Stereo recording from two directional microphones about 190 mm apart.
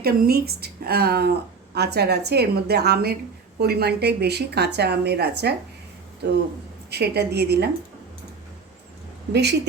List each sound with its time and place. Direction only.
0.0 s speech: 55° right (ahead or behind)
6.9 s speech: 60° right (ahead or behind)
9.3 s speech: 60° right (ahead or behind)